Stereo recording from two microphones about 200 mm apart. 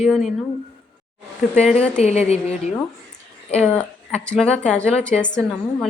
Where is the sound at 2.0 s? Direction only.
35° left (ahead or behind).